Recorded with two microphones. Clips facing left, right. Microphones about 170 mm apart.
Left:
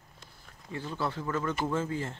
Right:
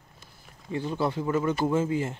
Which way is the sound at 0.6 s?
20° right (ahead or behind).